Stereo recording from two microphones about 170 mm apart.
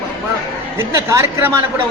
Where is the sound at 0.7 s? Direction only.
15° right (ahead or behind).